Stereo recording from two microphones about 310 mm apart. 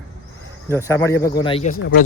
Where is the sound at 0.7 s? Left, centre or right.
Centre.